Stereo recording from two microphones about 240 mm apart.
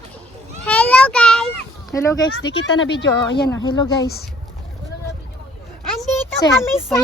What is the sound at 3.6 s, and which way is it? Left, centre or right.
Speech, centre.